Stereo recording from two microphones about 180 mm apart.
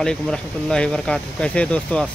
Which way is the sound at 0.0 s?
5° left (ahead or behind).